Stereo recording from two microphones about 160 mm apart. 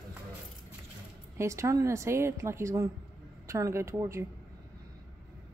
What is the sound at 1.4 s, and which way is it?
A woman's voice, 20° right (ahead or behind).